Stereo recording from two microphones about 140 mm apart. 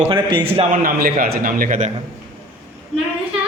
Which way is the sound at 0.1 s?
35° right (ahead or behind).